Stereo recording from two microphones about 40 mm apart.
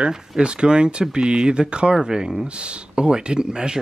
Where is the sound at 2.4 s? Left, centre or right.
Right.